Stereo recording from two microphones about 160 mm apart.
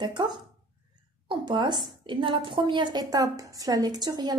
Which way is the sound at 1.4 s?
30° right (ahead or behind).